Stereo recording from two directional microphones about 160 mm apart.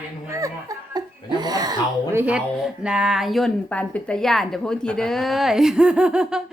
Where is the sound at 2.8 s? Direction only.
5° right (ahead or behind).